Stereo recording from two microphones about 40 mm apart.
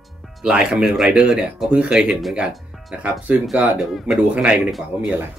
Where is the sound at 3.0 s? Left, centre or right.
Right.